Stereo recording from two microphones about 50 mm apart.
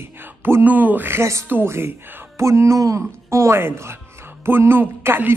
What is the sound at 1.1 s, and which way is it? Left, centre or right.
Speech, right.